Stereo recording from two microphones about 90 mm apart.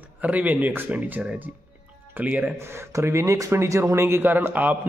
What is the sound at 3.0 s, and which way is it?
Speech, 30° right (ahead or behind).